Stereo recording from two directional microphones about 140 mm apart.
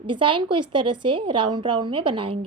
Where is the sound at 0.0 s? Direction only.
35° right (ahead or behind).